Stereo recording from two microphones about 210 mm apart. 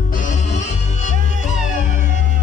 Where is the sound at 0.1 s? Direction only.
35° left (ahead or behind).